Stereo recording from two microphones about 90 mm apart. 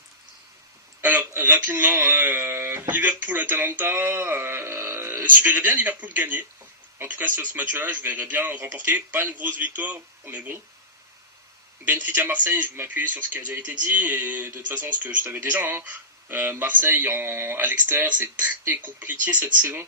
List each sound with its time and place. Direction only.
1.0 s speech: 20° right (ahead or behind)
11.9 s speech: 20° right (ahead or behind)